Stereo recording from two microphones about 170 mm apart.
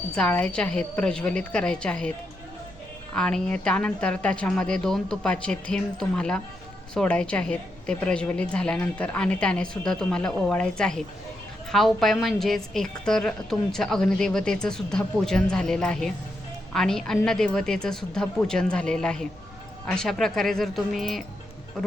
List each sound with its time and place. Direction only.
0.2 s a woman's voice: 5° left (ahead or behind)
3.2 s a woman's voice: 5° left (ahead or behind)